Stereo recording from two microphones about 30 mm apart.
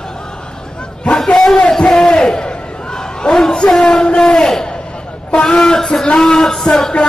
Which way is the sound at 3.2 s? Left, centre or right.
Left.